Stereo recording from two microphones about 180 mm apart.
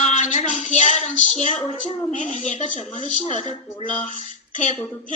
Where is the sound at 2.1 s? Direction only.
45° left (ahead or behind).